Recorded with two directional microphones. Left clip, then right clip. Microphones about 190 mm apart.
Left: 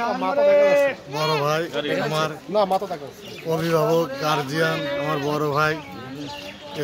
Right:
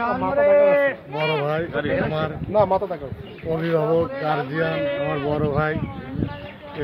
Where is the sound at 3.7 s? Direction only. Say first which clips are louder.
Even; 15° left (ahead or behind).